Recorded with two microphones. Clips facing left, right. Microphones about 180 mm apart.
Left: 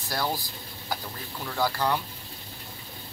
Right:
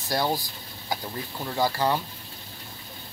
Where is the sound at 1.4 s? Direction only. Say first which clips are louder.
Right 2 dB; 15° right (ahead or behind).